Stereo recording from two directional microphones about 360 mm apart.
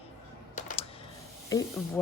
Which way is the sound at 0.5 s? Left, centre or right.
Centre.